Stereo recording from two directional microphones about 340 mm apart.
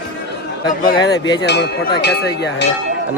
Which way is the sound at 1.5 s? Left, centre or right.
Left.